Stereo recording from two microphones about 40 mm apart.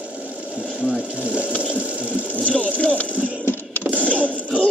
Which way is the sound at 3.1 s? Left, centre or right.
Right.